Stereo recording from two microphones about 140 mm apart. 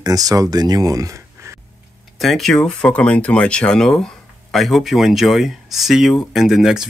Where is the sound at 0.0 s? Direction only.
25° right (ahead or behind).